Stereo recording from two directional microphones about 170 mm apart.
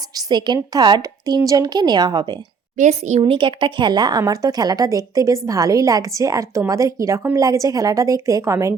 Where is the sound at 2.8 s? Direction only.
45° right (ahead or behind).